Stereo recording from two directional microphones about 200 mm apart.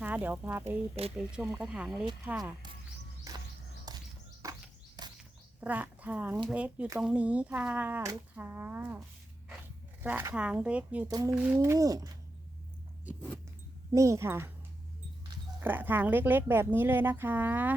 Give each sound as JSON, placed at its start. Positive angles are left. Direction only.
{"t": 0.0, "sound": "speech", "side_deg": -10}
{"t": 3.3, "sound": "walk", "side_deg": -15}
{"t": 3.9, "sound": "a sound", "side_deg": -20}
{"t": 5.0, "sound": "bird", "side_deg": -20}
{"t": 5.5, "sound": "speech", "side_deg": -10}
{"t": 10.0, "sound": "speech", "side_deg": -10}
{"t": 11.1, "sound": "speech", "side_deg": -20}
{"t": 13.9, "sound": "speech", "side_deg": -15}
{"t": 15.6, "sound": "speech", "side_deg": -10}